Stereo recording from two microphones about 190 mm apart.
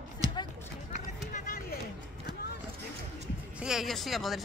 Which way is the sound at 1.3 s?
50° left (ahead or behind).